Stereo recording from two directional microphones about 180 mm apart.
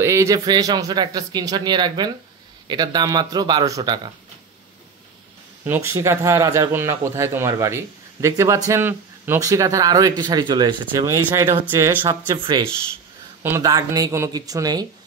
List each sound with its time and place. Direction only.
0.0 s speech: 15° right (ahead or behind)
5.7 s speech: 15° right (ahead or behind)